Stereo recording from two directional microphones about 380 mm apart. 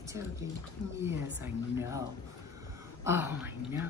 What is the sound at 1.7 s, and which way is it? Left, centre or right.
Speech, centre.